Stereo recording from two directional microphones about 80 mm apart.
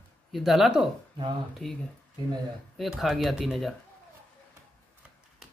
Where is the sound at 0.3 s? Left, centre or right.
Centre.